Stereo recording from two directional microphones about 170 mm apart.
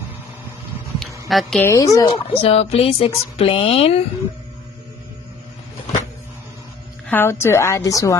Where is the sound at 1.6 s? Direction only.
20° left (ahead or behind).